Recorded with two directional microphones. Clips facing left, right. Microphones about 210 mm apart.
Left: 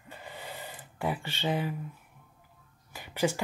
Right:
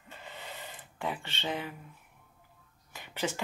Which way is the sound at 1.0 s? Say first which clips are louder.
Left 4 dB; 10° left (ahead or behind).